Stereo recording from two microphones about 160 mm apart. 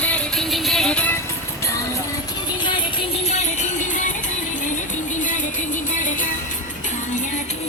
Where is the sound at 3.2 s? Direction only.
45° left (ahead or behind).